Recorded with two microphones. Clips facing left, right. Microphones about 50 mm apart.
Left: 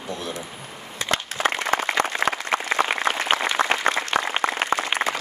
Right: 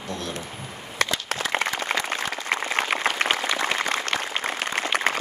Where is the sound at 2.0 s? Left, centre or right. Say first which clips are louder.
Left 5 dB; left.